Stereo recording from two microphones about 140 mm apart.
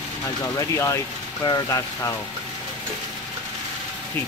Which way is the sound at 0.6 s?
25° left (ahead or behind).